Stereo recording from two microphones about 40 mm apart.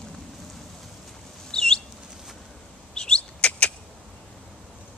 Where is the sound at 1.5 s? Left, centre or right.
Centre.